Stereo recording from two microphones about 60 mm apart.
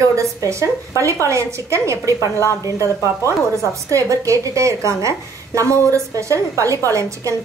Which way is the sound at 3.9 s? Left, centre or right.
Right.